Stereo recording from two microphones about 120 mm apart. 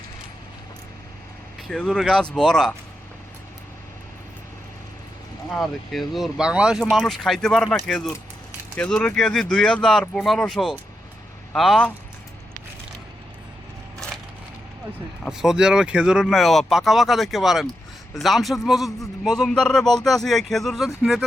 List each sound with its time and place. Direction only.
1.7 s a man's voice: 5° left (ahead or behind)
5.5 s a man's voice: centre (ahead or behind)
15.3 s a man's voice: 5° right (ahead or behind)